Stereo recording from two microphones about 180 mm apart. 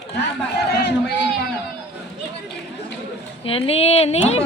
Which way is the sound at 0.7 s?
70° left (ahead or behind).